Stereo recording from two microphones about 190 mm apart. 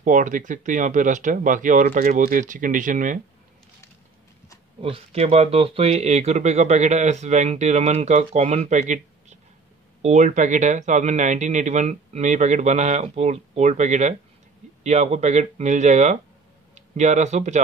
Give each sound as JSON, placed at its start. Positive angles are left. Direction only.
{"t": 0.0, "sound": "speech", "side_deg": -45}
{"t": 4.8, "sound": "speech", "side_deg": -30}